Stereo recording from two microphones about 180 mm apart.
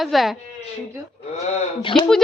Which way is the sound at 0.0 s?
Centre (ahead or behind).